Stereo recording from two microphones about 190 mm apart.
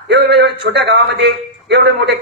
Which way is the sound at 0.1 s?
60° right (ahead or behind).